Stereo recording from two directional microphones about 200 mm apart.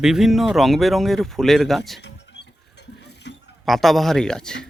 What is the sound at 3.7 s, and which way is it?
Speech, centre (ahead or behind).